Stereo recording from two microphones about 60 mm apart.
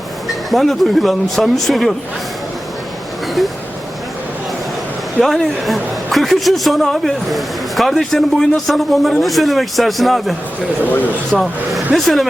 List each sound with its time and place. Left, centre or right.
0.3 s a man's voice: centre
5.2 s a man's voice: centre
10.8 s speech: left
11.3 s a man's voice: centre